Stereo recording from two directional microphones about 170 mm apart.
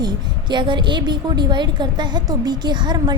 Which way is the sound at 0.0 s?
25° right (ahead or behind).